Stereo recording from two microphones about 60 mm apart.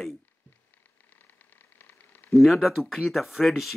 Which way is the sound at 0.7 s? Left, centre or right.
Left.